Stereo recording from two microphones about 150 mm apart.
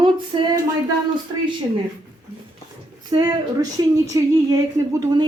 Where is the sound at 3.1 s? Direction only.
25° right (ahead or behind).